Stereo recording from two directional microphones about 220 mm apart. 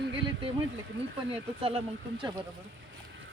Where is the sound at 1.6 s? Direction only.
25° right (ahead or behind).